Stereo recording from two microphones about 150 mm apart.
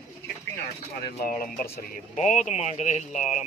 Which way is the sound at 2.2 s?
55° left (ahead or behind).